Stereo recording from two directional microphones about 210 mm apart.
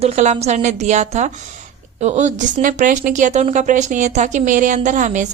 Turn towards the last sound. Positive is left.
turn(degrees=-35)  # may be behind; listen again after turning